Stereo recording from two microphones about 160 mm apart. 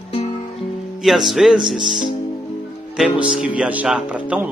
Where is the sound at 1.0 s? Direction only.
Centre (ahead or behind).